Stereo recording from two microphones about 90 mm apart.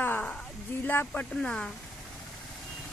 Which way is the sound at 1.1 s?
10° left (ahead or behind).